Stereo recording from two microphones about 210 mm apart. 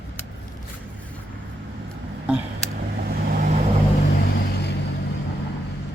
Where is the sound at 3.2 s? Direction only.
45° right (ahead or behind).